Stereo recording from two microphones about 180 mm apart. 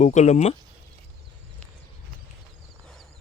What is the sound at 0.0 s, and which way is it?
Speech, 40° left (ahead or behind).